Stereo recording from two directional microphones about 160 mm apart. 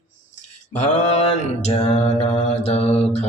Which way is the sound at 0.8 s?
45° left (ahead or behind).